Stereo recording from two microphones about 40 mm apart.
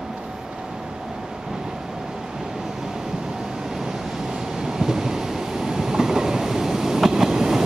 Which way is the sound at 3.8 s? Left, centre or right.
Centre.